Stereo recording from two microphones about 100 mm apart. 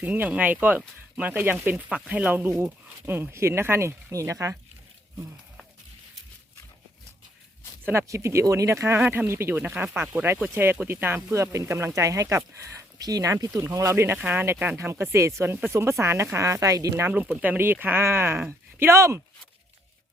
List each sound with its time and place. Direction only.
0.0 s speech: 15° right (ahead or behind)
8.0 s speech: 30° right (ahead or behind)
17.1 s speech: 15° right (ahead or behind)